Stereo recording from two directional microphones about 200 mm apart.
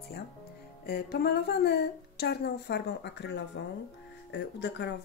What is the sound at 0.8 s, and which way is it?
Speech, 50° left (ahead or behind).